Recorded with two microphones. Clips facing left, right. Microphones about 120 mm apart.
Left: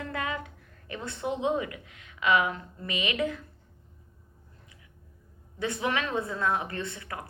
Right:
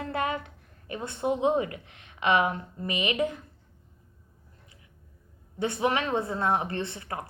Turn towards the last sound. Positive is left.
turn(degrees=-30)  # may be behind; listen again after turning